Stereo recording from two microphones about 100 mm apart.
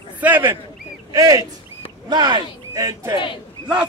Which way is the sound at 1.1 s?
35° right (ahead or behind).